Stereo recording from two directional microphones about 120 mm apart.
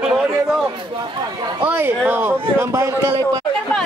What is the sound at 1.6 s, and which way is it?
A man's voice, 15° right (ahead or behind).